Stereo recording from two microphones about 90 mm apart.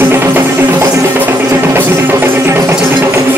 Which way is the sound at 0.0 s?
25° right (ahead or behind).